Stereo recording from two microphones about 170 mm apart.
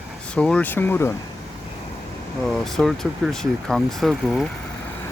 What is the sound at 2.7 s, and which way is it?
Speech, centre (ahead or behind).